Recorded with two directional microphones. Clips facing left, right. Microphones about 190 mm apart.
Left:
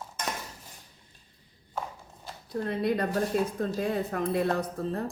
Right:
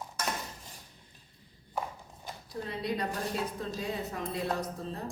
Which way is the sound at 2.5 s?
55° left (ahead or behind).